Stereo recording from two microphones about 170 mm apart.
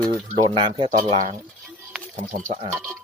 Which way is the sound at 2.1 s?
50° right (ahead or behind).